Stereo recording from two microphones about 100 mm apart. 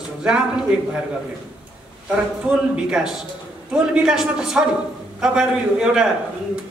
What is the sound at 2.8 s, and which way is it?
A woman's voice, 5° right (ahead or behind).